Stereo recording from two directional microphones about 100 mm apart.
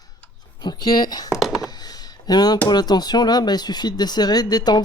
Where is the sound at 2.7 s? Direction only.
45° left (ahead or behind).